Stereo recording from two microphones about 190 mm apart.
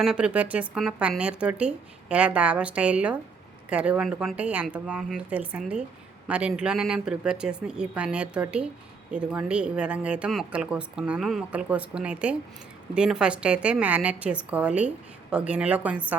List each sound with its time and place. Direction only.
0.0 s speech: 5° right (ahead or behind)